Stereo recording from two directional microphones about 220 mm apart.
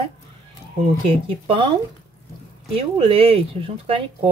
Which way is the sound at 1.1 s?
25° right (ahead or behind).